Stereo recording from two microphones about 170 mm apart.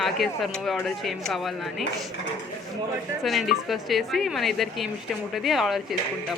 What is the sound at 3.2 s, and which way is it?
A woman's voice, centre (ahead or behind).